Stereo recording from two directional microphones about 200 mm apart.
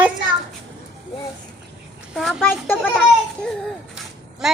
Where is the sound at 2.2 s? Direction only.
Centre (ahead or behind).